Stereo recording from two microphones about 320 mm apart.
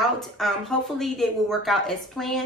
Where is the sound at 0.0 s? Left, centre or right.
Centre.